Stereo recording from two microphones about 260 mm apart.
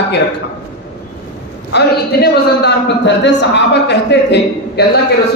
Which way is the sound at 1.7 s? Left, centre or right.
Left.